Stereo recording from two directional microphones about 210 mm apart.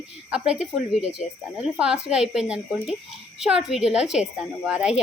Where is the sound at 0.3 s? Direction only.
5° right (ahead or behind).